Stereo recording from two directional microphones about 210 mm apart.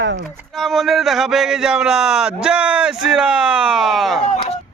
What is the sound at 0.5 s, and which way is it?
Speech, centre (ahead or behind).